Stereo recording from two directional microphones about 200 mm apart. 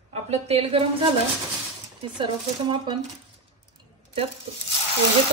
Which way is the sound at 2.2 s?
25° right (ahead or behind).